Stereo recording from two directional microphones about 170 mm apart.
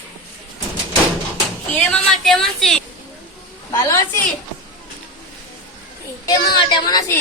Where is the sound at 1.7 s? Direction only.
5° left (ahead or behind).